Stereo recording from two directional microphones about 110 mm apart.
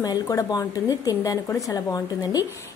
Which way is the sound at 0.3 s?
30° left (ahead or behind).